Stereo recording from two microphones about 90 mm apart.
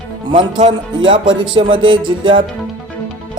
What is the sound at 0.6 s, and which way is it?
Speech, 90° right.